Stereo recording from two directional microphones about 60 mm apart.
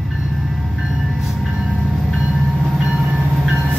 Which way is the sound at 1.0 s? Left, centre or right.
Centre.